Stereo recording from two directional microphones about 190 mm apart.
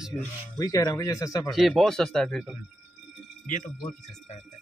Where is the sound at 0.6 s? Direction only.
20° left (ahead or behind).